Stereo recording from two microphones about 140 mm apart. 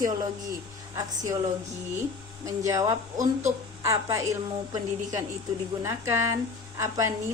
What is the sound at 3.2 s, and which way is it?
Speech, 60° right (ahead or behind).